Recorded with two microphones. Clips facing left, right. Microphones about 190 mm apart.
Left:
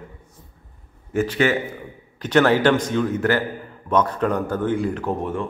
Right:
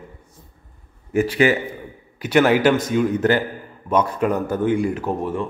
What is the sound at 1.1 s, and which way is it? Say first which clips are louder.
Speech: right 2 dB; 10° right (ahead or behind).